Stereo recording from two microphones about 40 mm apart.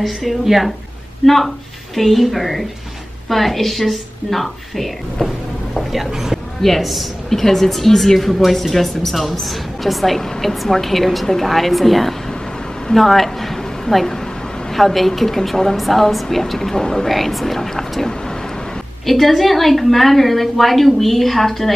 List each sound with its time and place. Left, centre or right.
0.0 s a woman's voice: centre
6.6 s a woman's voice: centre